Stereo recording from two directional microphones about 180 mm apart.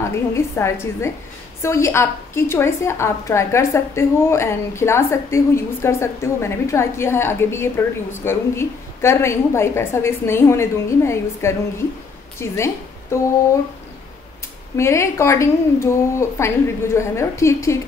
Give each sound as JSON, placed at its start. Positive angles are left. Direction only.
{"t": 0.0, "sound": "a woman's voice", "side_deg": 15}
{"t": 14.8, "sound": "a woman's voice", "side_deg": 15}